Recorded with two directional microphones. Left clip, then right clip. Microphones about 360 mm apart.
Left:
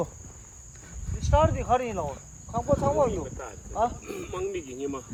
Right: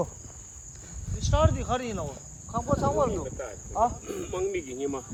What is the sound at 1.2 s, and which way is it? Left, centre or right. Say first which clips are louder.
Speech: left 3 dB; centre.